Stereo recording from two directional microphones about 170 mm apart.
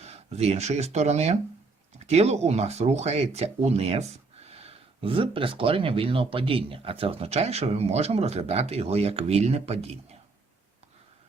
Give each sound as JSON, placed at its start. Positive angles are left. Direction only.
{"t": 0.0, "sound": "speech", "side_deg": -40}